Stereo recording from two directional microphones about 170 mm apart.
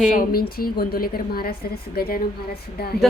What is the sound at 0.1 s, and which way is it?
A woman's voice, 55° left (ahead or behind).